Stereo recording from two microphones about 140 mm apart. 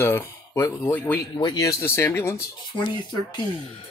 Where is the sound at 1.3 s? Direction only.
30° left (ahead or behind).